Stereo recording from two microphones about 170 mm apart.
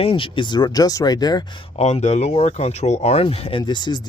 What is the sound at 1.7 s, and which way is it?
Speech, 40° left (ahead or behind).